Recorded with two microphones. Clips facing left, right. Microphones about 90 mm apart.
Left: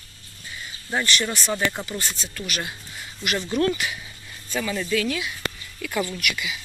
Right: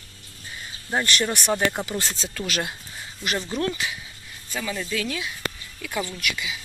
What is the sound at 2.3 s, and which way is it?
Speech, 90° right.